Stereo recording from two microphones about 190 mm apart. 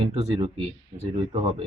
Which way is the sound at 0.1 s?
35° right (ahead or behind).